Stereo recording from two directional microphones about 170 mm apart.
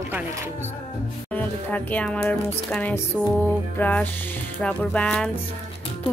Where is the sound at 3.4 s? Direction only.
10° left (ahead or behind).